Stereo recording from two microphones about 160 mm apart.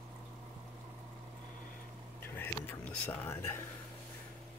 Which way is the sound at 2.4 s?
10° left (ahead or behind).